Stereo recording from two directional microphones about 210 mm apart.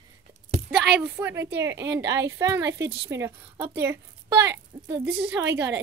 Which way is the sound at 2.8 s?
50° right (ahead or behind).